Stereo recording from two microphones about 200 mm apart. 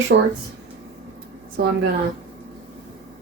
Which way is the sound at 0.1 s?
70° right (ahead or behind).